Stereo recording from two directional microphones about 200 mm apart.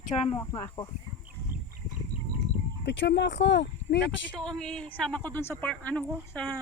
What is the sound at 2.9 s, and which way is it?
Speech, 60° left (ahead or behind).